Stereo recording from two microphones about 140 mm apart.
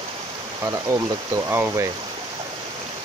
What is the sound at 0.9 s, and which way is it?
Speech, 20° right (ahead or behind).